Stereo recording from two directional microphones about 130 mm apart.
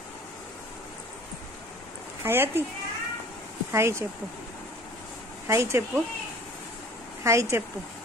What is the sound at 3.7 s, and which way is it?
Speech, 20° right (ahead or behind).